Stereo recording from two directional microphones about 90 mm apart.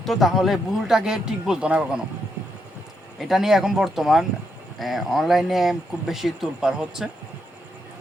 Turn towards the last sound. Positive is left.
turn(degrees=-5)  # may be behind; listen again after turning